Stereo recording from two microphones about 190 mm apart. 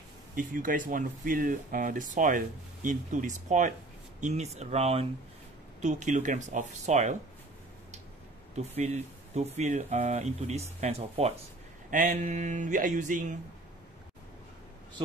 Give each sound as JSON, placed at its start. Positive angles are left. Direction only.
{"t": 0.4, "sound": "speech", "side_deg": -45}
{"t": 8.5, "sound": "speech", "side_deg": -35}
{"t": 11.9, "sound": "speech", "side_deg": -45}